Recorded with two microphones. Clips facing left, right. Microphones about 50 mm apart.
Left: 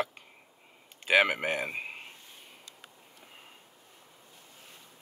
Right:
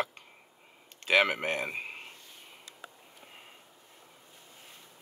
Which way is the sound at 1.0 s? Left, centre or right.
Centre.